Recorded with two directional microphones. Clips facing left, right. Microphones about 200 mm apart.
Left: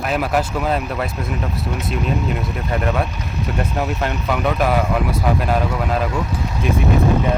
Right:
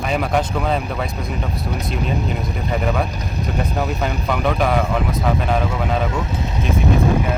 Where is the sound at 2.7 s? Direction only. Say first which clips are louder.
Even; centre (ahead or behind).